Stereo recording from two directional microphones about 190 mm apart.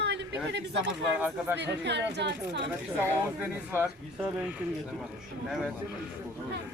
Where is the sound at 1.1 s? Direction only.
5° right (ahead or behind).